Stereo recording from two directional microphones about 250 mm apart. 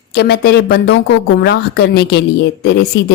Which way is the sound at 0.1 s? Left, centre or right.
Left.